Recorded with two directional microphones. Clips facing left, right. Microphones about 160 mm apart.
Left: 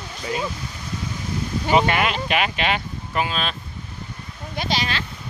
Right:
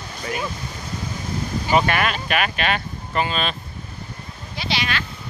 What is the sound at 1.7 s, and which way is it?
Speech, 20° left (ahead or behind).